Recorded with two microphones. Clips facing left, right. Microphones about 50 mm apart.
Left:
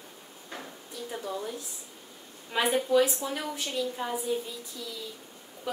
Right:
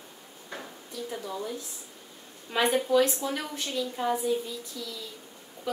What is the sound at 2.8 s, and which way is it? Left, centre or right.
Speech, centre.